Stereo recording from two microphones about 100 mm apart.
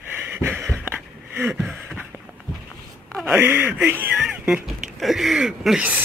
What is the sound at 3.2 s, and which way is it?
Speech, 20° right (ahead or behind).